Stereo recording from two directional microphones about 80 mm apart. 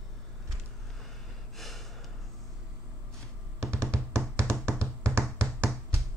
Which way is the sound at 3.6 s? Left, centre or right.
Right.